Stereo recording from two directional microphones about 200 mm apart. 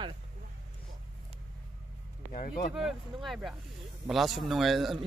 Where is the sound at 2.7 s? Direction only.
Centre (ahead or behind).